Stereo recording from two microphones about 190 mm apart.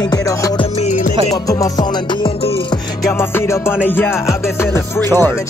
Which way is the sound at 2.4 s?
30° left (ahead or behind).